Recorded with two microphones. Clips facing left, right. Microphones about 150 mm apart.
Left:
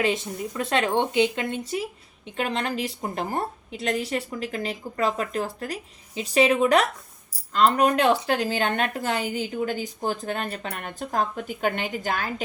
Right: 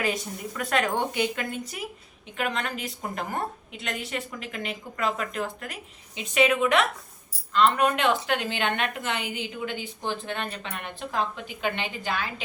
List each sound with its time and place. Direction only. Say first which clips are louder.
0.0 s speech: left 4 dB; 25° left (ahead or behind); by 12.3 s 45° left (ahead or behind)